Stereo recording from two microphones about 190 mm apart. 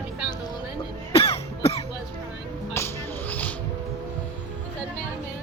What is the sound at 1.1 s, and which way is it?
Cough, 30° left (ahead or behind).